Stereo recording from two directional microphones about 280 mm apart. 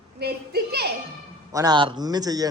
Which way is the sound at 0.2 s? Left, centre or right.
Right.